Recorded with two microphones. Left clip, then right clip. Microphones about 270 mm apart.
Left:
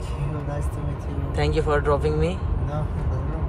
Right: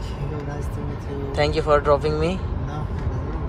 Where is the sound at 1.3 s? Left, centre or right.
Centre.